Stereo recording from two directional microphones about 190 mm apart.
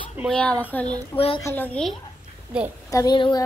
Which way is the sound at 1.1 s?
30° left (ahead or behind).